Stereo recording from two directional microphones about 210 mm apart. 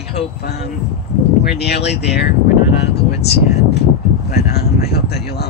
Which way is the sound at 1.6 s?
50° left (ahead or behind).